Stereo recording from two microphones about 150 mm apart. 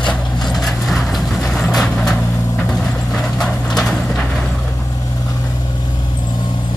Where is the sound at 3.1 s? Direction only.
5° left (ahead or behind).